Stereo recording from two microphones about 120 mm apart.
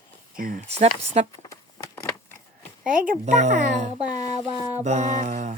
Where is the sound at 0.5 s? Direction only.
65° right (ahead or behind).